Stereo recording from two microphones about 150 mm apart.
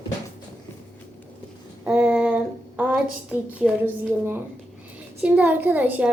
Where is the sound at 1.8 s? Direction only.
10° right (ahead or behind).